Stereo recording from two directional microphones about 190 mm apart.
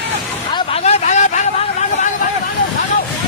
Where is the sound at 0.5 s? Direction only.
30° left (ahead or behind).